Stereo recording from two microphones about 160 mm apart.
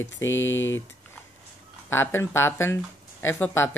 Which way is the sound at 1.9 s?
15° left (ahead or behind).